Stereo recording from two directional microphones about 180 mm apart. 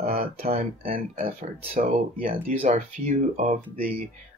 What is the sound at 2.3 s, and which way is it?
Speech, 35° right (ahead or behind).